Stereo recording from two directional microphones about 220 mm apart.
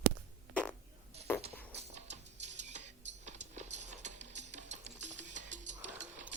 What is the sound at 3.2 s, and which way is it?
Clip-clop, 30° right (ahead or behind).